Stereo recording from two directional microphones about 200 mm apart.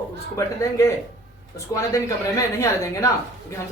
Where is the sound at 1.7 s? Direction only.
15° left (ahead or behind).